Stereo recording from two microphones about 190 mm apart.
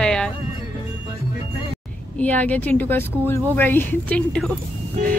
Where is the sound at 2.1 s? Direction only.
10° left (ahead or behind).